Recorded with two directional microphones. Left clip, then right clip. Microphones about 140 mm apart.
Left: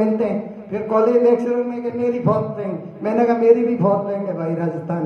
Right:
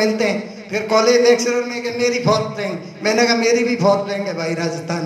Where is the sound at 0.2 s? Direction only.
40° left (ahead or behind).